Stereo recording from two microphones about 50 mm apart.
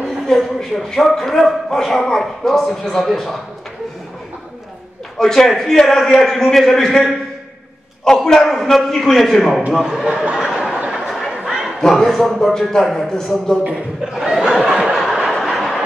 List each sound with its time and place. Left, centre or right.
0.3 s a man's voice: centre
5.2 s speech: centre
9.7 s a man's voice: centre
10.3 s a sound: centre
11.1 s chatter: centre
11.9 s speech: centre
13.7 s speech: centre
15.0 s train: centre